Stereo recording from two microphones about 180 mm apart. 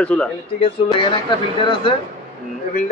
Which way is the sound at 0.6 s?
30° left (ahead or behind).